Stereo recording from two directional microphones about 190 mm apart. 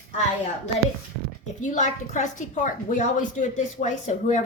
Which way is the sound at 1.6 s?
40° left (ahead or behind).